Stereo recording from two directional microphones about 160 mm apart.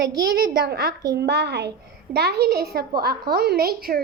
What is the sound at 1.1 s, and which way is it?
A woman's voice, 90° right.